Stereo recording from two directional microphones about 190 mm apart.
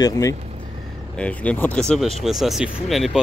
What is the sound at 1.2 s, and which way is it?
Speech, 5° left (ahead or behind).